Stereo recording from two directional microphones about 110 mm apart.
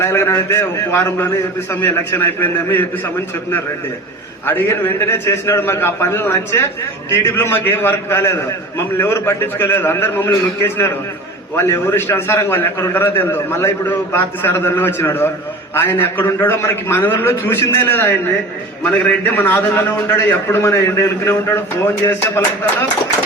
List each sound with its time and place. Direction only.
0.0 s a man's voice: 25° left (ahead or behind)
4.4 s a man's voice: 20° left (ahead or behind)
11.5 s a man's voice: 25° left (ahead or behind)